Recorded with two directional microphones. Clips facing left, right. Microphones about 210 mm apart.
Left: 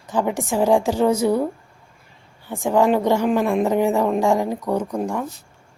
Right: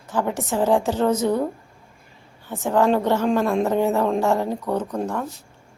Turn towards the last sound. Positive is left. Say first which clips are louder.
# left 2 dB
turn(degrees=10)  # may be behind; listen again after turning